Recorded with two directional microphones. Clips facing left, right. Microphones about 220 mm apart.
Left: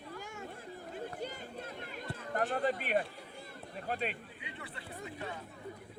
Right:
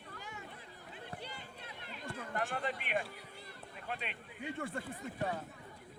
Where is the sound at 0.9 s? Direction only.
45° left (ahead or behind).